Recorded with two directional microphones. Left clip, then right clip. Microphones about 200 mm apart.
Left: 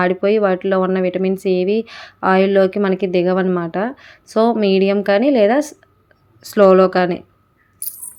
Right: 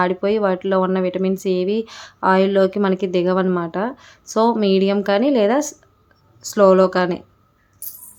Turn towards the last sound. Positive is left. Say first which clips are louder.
# left 2 dB
turn(degrees=5)  # may be behind; listen again after turning